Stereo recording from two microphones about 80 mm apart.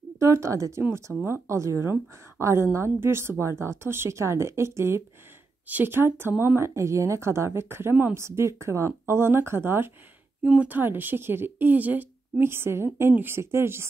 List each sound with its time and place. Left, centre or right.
0.2 s a woman's voice: right
6.7 s a woman's voice: right
10.4 s speech: centre
10.7 s a woman's voice: right